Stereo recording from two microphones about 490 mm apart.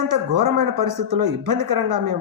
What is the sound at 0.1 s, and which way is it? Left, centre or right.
Speech, right.